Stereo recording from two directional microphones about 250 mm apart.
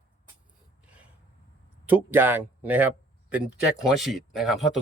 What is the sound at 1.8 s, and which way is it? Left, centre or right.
A man's voice, centre.